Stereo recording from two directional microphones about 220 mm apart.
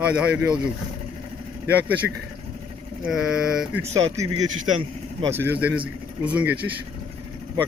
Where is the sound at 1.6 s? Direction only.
5° right (ahead or behind).